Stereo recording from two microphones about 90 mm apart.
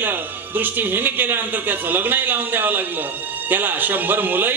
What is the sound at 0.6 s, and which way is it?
A man's voice, 20° right (ahead or behind).